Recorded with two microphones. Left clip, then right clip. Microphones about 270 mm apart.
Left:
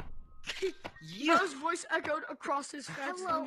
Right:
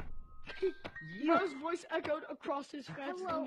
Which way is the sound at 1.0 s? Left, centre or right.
Left.